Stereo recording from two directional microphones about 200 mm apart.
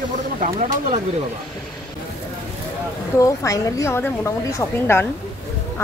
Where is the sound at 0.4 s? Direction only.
35° right (ahead or behind).